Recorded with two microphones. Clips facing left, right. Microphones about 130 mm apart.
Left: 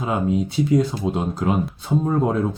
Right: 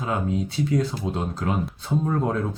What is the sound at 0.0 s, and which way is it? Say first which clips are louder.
Speech: left 4 dB; 15° left (ahead or behind).